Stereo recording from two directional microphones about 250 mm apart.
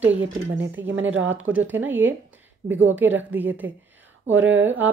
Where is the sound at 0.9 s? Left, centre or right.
Right.